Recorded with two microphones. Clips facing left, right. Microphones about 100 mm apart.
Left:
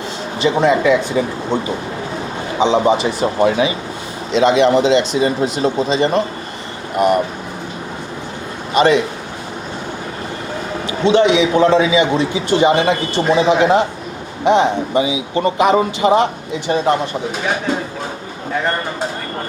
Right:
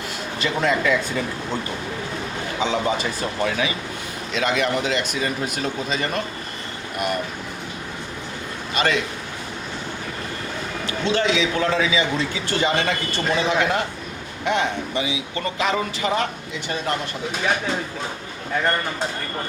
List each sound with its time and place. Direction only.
0.3 s a man's voice: 25° left (ahead or behind)
8.7 s a man's voice: 25° left (ahead or behind)
11.1 s a man's voice: 25° left (ahead or behind)